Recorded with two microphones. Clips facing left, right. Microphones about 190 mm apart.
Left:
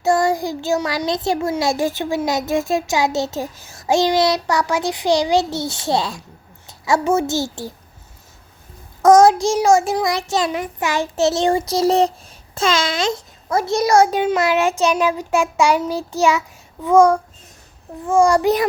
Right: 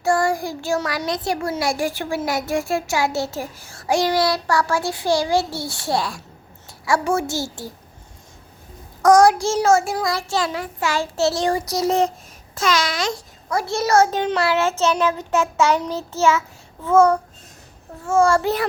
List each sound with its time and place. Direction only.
0.0 s a child's voice: 20° left (ahead or behind)
9.0 s a child's voice: 25° left (ahead or behind)